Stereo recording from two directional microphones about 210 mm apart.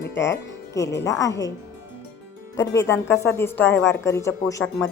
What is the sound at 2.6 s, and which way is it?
Speech, 10° left (ahead or behind).